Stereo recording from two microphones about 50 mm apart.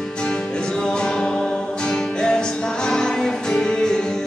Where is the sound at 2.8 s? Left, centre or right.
Centre.